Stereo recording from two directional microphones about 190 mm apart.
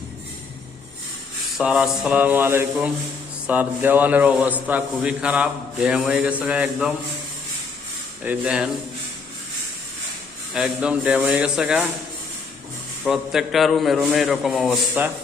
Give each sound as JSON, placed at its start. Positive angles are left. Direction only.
{"t": 1.5, "sound": "a man's voice", "side_deg": -5}
{"t": 8.2, "sound": "a man's voice", "side_deg": -5}
{"t": 10.5, "sound": "a man's voice", "side_deg": -5}
{"t": 13.1, "sound": "a man's voice", "side_deg": 0}